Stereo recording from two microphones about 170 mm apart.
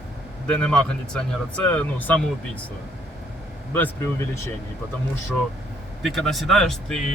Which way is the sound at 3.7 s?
10° left (ahead or behind).